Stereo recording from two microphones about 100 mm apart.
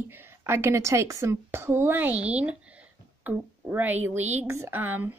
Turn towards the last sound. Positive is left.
turn(degrees=-20)  # may be behind; listen again after turning